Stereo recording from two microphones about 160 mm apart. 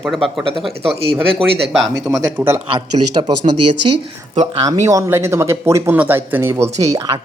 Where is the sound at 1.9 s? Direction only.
20° right (ahead or behind).